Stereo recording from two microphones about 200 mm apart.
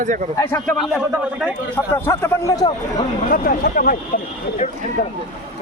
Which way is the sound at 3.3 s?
45° left (ahead or behind).